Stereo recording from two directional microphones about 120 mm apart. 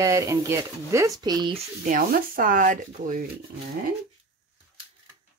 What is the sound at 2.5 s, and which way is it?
Speech, 90° right.